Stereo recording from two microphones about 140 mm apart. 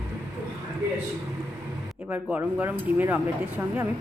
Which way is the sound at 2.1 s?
10° right (ahead or behind).